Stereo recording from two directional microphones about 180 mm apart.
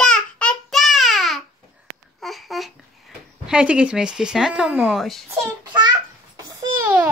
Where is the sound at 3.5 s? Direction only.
5° right (ahead or behind).